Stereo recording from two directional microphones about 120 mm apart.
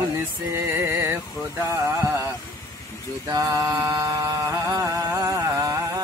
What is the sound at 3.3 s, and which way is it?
Music, 25° right (ahead or behind).